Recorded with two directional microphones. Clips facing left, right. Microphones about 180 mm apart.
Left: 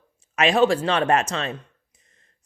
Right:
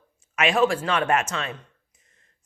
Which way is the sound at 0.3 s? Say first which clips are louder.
Left 3 dB; 35° left (ahead or behind).